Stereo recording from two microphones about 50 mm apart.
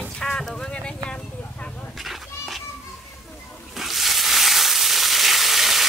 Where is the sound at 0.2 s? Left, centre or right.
Centre.